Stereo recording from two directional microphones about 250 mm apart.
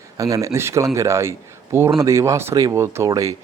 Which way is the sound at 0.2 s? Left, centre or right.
Centre.